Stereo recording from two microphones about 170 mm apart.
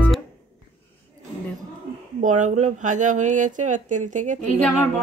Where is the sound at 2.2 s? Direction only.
45° right (ahead or behind).